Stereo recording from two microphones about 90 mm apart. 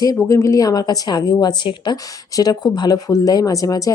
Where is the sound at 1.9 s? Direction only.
45° left (ahead or behind).